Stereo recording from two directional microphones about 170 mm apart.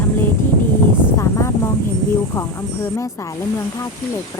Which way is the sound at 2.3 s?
15° left (ahead or behind).